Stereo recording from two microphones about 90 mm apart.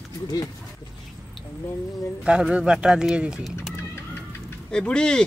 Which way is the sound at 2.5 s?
10° right (ahead or behind).